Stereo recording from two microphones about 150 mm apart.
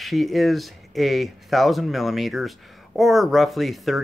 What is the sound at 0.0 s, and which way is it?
Speech, centre (ahead or behind).